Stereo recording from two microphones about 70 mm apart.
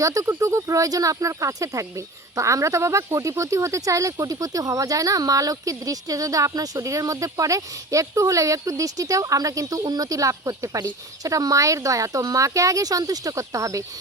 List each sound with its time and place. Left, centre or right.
0.0 s speech: right
9.8 s speech: right
10.8 s speech: right
11.3 s speech: right